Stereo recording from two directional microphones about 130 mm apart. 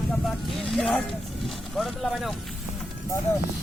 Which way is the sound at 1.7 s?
Centre (ahead or behind).